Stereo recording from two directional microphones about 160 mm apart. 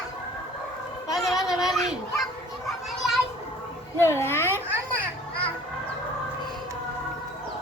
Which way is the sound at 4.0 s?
15° left (ahead or behind).